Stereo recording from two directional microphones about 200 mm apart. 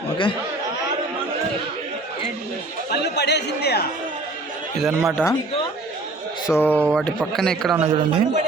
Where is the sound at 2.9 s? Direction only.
55° left (ahead or behind).